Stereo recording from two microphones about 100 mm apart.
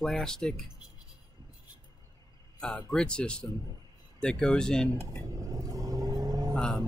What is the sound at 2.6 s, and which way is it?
Speech, 10° left (ahead or behind).